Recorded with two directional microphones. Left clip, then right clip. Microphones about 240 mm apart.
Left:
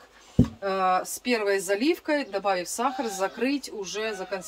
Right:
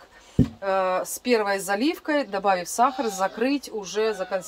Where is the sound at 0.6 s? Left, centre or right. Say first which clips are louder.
Right 1 dB; centre.